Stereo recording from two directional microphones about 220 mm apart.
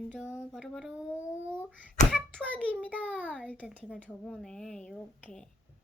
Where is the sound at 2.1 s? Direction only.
5° left (ahead or behind).